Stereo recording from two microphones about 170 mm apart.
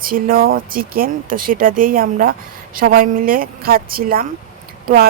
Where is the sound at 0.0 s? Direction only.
55° right (ahead or behind).